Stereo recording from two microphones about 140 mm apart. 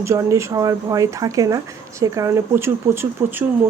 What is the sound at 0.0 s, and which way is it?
Speech, 20° right (ahead or behind).